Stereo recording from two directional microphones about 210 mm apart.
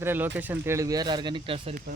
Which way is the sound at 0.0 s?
10° right (ahead or behind).